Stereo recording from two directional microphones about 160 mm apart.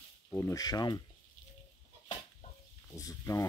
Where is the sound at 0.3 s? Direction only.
15° left (ahead or behind).